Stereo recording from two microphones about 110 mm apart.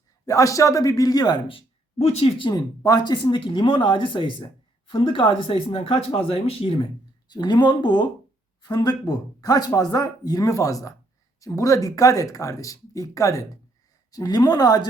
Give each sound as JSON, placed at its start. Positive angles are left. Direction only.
{"t": 0.3, "sound": "speech", "side_deg": 30}
{"t": 1.5, "sound": "speech", "side_deg": 60}
{"t": 2.4, "sound": "speech", "side_deg": 35}
{"t": 7.3, "sound": "speech", "side_deg": 40}